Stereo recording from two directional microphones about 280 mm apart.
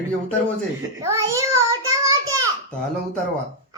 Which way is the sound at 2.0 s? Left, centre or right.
Centre.